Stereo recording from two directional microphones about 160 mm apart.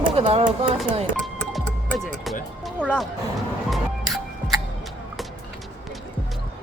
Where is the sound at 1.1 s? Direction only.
5° left (ahead or behind).